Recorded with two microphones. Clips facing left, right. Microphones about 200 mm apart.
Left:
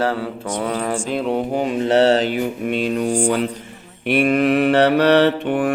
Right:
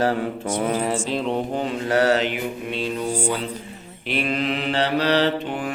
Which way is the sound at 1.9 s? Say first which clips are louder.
Left 4 dB; 25° left (ahead or behind).